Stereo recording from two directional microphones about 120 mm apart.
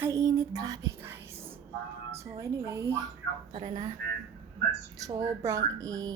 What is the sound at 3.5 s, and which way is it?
Speech, 45° right (ahead or behind).